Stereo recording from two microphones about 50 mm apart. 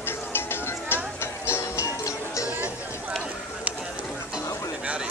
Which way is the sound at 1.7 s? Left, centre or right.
Left.